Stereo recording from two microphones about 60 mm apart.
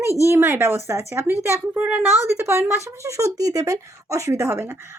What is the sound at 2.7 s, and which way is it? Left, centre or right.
Speech, right.